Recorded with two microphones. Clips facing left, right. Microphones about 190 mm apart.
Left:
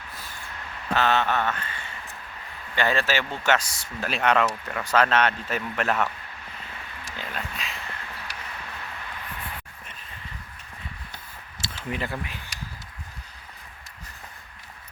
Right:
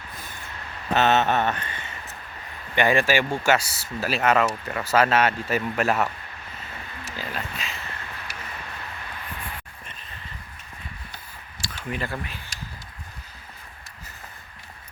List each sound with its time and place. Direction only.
0.9 s speech: 20° right (ahead or behind)
7.0 s a sound: 5° right (ahead or behind)
11.6 s speech: 20° left (ahead or behind)